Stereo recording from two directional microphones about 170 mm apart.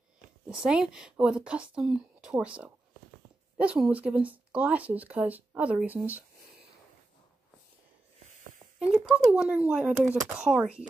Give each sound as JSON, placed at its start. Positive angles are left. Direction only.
{"t": 0.5, "sound": "speech", "side_deg": -5}
{"t": 8.7, "sound": "speech", "side_deg": -5}